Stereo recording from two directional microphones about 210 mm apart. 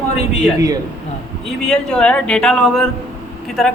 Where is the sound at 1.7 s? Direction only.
5° left (ahead or behind).